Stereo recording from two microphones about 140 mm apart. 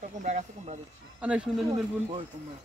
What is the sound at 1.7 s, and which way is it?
Speech, 45° right (ahead or behind).